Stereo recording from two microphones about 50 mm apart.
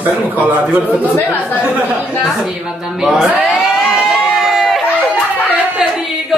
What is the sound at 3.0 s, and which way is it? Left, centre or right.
Speech, centre.